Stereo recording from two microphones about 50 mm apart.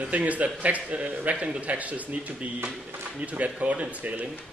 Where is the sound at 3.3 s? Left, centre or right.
Right.